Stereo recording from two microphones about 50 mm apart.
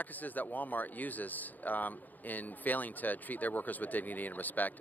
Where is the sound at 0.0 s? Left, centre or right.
Left.